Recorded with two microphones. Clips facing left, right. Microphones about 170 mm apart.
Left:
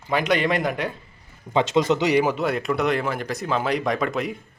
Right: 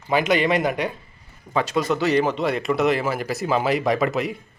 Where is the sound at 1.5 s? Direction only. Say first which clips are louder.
Left 2 dB; 20° left (ahead or behind).